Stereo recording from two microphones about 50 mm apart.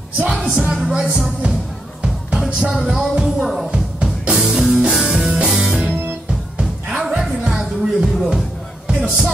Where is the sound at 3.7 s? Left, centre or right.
Right.